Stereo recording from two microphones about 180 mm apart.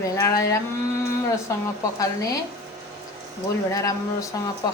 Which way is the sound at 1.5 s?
15° left (ahead or behind).